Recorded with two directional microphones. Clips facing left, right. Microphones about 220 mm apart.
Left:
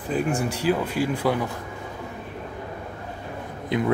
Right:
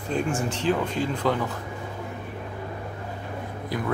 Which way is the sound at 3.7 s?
20° left (ahead or behind).